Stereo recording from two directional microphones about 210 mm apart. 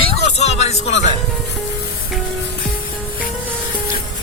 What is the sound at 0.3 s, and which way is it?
Music, 30° left (ahead or behind).